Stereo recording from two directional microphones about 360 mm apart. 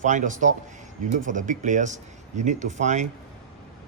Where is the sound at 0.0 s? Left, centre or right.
Right.